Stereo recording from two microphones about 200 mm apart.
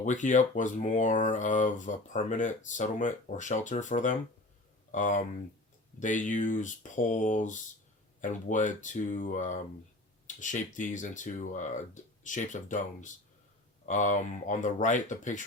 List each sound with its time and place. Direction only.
0.0 s speech: 40° left (ahead or behind)